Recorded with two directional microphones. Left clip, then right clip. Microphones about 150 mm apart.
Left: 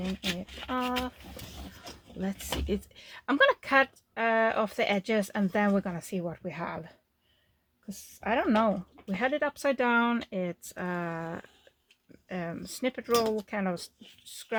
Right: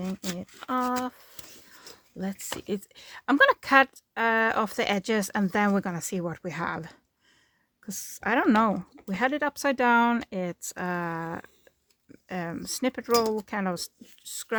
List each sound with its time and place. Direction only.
0.3 s speech: 40° right (ahead or behind)